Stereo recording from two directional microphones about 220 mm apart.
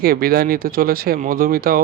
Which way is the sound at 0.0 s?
45° right (ahead or behind).